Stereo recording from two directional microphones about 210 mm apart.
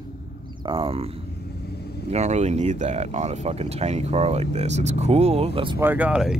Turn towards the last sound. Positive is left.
turn(degrees=-5)  # may be behind; listen again after turning